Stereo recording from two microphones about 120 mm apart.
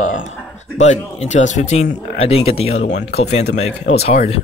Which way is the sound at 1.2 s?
90° left.